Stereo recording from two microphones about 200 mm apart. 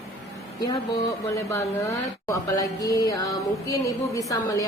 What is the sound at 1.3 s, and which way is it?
Speech, 15° left (ahead or behind).